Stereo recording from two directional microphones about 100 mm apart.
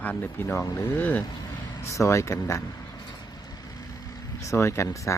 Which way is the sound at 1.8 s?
30° left (ahead or behind).